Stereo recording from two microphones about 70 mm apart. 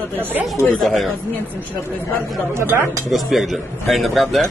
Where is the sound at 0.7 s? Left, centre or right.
Centre.